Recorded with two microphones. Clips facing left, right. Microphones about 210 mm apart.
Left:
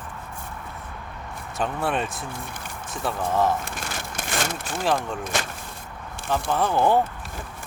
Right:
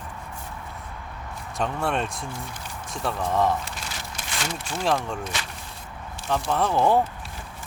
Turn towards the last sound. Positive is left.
turn(degrees=0)  # may be behind; listen again after turning